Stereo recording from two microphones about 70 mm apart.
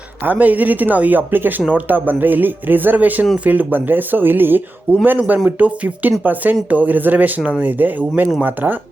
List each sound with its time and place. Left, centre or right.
0.3 s speech: right